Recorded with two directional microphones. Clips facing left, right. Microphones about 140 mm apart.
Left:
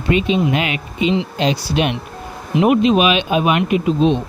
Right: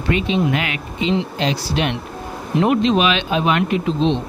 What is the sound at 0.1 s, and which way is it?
Speech, 20° left (ahead or behind).